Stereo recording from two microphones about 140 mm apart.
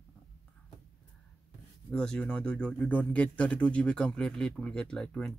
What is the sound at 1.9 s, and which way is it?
Speech, 5° left (ahead or behind).